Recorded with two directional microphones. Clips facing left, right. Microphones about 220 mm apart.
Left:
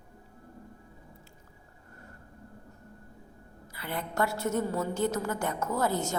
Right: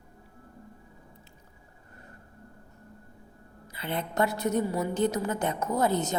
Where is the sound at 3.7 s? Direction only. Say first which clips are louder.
Right 3 dB; 20° right (ahead or behind).